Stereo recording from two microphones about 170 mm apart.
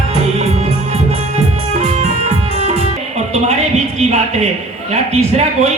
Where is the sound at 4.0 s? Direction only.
40° right (ahead or behind).